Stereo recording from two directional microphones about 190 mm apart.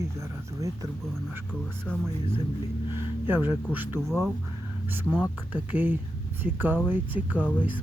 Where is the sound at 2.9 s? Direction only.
10° right (ahead or behind).